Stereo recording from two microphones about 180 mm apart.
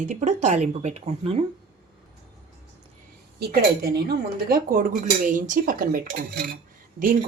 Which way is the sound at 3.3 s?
60° right (ahead or behind).